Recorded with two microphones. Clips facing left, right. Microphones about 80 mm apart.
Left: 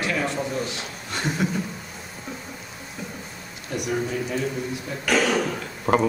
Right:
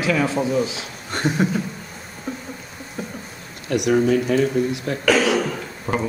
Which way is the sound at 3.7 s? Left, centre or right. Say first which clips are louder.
Right 9 dB; right.